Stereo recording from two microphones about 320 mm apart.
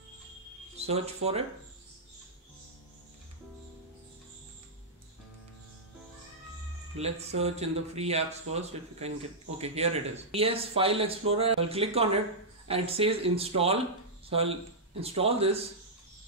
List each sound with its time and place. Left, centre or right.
0.7 s speech: centre
7.0 s speech: centre